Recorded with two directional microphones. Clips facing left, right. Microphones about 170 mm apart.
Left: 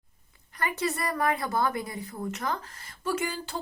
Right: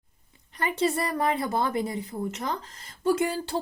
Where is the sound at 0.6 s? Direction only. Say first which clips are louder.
Right 4 dB; 25° right (ahead or behind).